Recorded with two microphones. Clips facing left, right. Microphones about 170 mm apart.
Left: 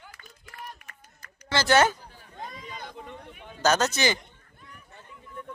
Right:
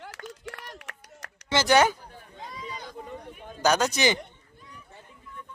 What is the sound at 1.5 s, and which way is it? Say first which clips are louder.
Speech: right 1 dB; 20° right (ahead or behind).